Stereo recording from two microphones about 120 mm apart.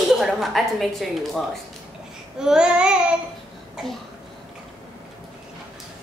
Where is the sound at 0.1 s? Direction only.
Centre (ahead or behind).